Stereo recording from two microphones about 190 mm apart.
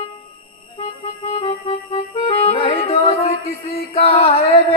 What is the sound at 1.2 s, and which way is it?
Music, 25° left (ahead or behind).